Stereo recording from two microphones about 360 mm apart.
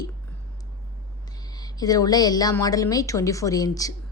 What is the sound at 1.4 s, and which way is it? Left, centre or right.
A woman's voice, centre.